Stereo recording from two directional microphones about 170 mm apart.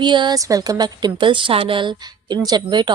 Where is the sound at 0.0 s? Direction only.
25° right (ahead or behind).